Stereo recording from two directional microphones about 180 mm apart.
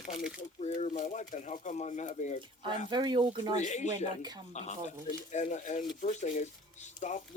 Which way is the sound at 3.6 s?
40° left (ahead or behind).